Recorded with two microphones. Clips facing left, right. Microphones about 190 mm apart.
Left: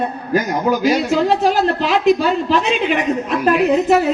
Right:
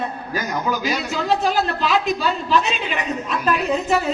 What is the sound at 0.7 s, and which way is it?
A man's voice, 55° left (ahead or behind).